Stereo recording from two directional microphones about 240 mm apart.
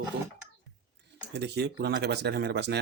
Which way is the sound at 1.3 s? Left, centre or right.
Right.